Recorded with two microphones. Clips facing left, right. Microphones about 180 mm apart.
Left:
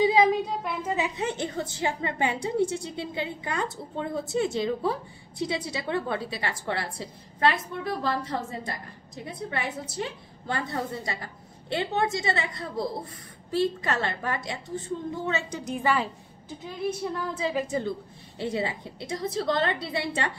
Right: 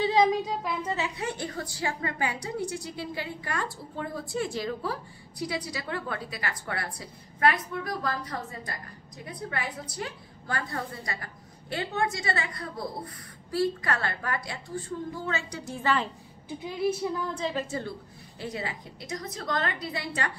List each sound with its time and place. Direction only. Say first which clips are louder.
0.0 s speech: left 2 dB; 5° left (ahead or behind)
0.9 s a woman's voice: left 3 dB; 20° left (ahead or behind)
16.4 s a woman's voice: right 3 dB; 10° right (ahead or behind); by 20.1 s 25° left (ahead or behind)